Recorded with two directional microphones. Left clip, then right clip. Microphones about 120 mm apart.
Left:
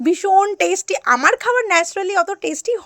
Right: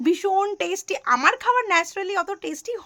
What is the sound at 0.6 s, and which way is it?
A woman's voice, 55° left (ahead or behind).